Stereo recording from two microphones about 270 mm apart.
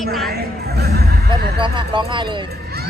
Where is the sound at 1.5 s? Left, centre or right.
Centre.